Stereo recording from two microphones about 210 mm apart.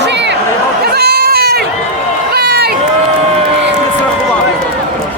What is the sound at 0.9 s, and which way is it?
Goat, 50° right (ahead or behind).